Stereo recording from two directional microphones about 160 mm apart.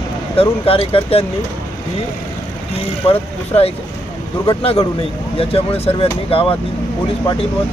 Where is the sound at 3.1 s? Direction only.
40° left (ahead or behind).